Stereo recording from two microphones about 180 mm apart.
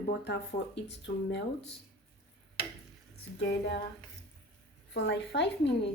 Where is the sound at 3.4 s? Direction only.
70° left (ahead or behind).